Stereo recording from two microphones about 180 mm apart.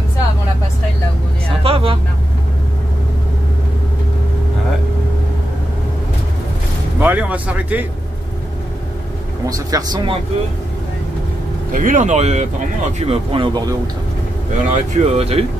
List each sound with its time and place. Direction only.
1.6 s vehicle: 30° right (ahead or behind)
7.0 s a sound: 10° right (ahead or behind)
9.5 s speech: 20° right (ahead or behind)
11.7 s speech: 45° right (ahead or behind); by 13.7 s 30° right (ahead or behind)
14.7 s speech: 35° right (ahead or behind)